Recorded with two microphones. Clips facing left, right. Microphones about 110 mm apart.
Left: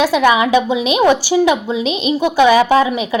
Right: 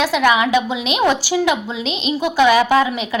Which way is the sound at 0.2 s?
25° left (ahead or behind).